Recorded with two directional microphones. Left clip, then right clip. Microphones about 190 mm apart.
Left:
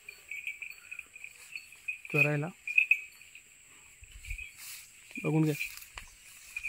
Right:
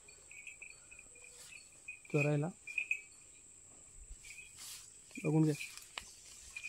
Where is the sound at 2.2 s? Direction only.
30° left (ahead or behind).